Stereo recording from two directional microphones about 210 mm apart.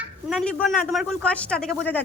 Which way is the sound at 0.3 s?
Centre (ahead or behind).